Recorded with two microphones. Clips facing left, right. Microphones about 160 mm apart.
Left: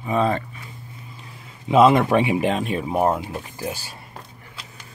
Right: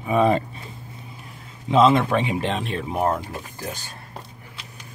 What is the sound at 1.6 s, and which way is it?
Speech, 10° left (ahead or behind).